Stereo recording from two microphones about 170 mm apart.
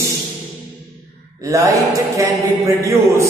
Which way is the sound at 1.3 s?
20° right (ahead or behind).